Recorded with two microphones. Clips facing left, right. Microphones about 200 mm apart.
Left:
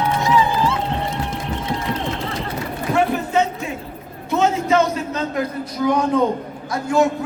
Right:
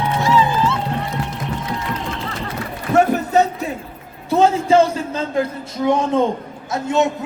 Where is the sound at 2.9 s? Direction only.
40° right (ahead or behind).